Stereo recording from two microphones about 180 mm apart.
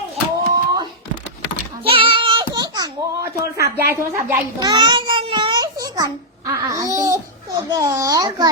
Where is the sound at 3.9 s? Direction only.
15° right (ahead or behind).